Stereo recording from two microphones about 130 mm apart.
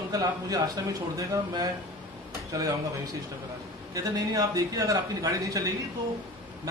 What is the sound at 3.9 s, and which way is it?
A man's voice, 25° right (ahead or behind).